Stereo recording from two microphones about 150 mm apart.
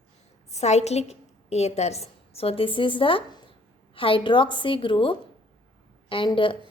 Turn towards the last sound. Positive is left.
turn(degrees=35)  # may be behind; listen again after turning